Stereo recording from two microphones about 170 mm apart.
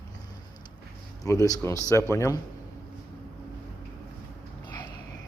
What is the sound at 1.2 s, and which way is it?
Speech, 20° left (ahead or behind).